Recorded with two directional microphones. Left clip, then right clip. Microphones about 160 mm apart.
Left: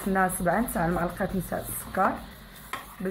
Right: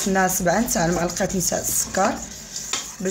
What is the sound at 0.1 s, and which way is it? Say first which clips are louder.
Speech: right 5 dB; 50° right (ahead or behind).